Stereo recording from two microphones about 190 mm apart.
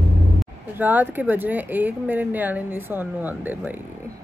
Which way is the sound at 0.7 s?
10° right (ahead or behind).